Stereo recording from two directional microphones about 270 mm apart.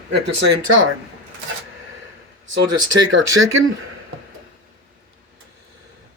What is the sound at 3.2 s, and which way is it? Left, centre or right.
Speech, right.